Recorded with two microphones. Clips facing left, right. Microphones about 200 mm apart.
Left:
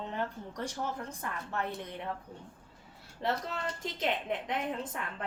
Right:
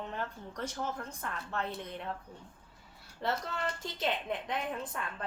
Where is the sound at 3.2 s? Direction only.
20° left (ahead or behind).